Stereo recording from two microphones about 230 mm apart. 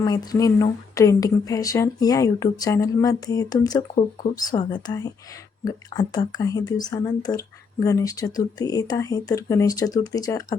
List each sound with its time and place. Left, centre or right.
0.0 s speech: centre